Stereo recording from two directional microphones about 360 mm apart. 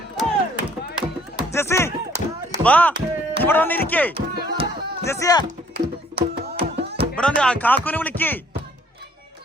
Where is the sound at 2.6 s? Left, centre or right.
Centre.